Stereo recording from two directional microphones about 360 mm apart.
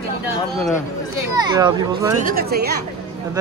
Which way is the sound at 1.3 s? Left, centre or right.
Centre.